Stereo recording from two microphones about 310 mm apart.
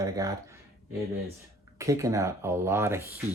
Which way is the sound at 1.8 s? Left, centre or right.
Centre.